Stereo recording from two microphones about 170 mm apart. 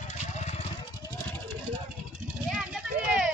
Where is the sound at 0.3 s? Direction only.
40° left (ahead or behind).